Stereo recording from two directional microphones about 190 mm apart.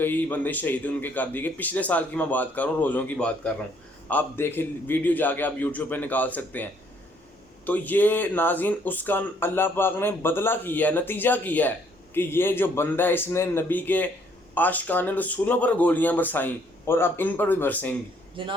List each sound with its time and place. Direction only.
0.0 s speech: 10° left (ahead or behind)
18.4 s speech: 25° right (ahead or behind)